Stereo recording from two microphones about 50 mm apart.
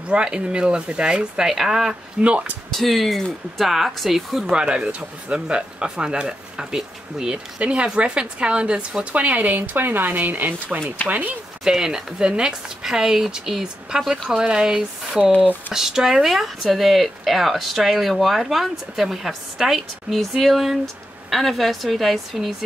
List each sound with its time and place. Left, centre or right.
0.1 s speech: centre
1.5 s speech: centre
2.2 s speech: right
2.7 s speech: centre
4.5 s speech: centre
11.6 s speech: centre